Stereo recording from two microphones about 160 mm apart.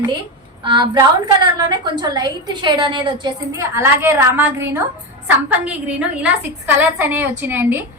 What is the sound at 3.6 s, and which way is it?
A woman's voice, 15° right (ahead or behind).